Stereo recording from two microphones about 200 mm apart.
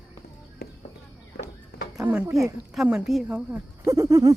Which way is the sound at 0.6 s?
50° left (ahead or behind).